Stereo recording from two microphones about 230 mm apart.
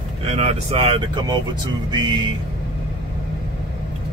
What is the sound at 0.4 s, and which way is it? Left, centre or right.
Speech, right.